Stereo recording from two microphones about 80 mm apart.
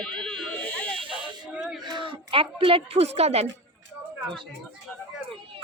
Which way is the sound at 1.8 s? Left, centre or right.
Right.